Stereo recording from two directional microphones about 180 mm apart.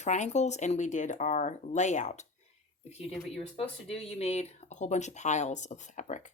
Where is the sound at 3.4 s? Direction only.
35° left (ahead or behind).